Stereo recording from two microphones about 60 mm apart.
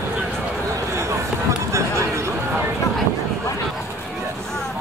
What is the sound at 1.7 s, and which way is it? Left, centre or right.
Chatter, right.